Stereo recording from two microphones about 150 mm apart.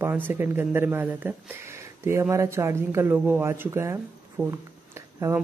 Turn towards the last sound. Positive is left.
turn(degrees=-20)  # may be behind; listen again after turning